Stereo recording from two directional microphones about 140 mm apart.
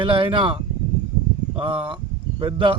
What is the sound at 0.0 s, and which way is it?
Speech, 40° right (ahead or behind).